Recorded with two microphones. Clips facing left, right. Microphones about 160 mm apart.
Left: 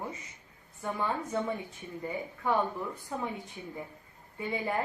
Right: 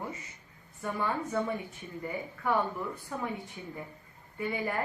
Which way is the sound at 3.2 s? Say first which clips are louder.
Even; 20° left (ahead or behind).